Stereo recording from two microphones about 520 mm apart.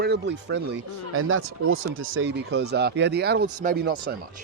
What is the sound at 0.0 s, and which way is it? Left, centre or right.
Speech, centre.